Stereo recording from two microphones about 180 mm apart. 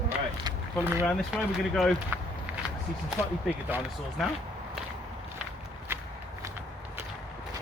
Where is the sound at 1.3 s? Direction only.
5° right (ahead or behind).